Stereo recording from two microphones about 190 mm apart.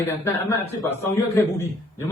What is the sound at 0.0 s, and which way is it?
A man's voice, 10° left (ahead or behind).